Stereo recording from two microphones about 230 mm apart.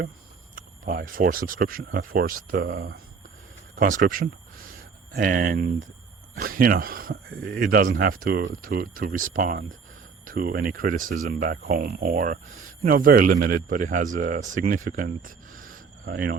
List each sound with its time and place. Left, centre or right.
0.5 s speech: right
2.6 s speech: right
3.8 s speech: right